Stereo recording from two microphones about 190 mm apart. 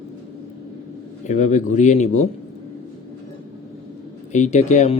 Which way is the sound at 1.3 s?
40° left (ahead or behind).